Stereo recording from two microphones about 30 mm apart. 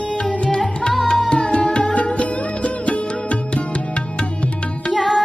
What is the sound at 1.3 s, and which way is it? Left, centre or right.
Music, left.